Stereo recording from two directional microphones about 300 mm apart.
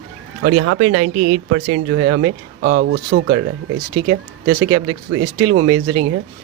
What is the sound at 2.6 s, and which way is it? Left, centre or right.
Speech, right.